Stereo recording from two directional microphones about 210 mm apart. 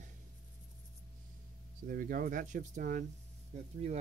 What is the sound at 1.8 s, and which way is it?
Speech, 45° right (ahead or behind).